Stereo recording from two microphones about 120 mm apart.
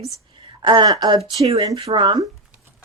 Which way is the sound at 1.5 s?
35° right (ahead or behind).